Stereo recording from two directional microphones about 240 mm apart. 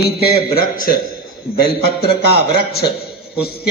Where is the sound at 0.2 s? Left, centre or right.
Left.